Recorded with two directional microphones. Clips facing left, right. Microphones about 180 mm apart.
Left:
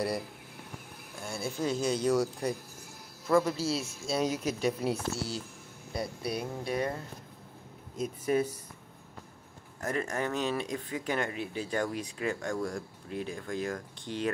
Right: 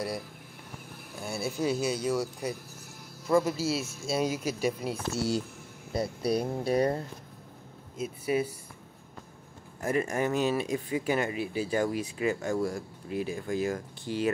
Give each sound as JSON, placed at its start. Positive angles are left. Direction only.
{"t": 1.2, "sound": "speech", "side_deg": -5}
{"t": 5.9, "sound": "speech", "side_deg": -35}
{"t": 8.0, "sound": "speech", "side_deg": -10}
{"t": 9.8, "sound": "speech", "side_deg": -10}